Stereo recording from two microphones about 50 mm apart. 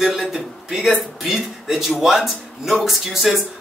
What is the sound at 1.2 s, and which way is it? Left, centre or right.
A man's voice, centre.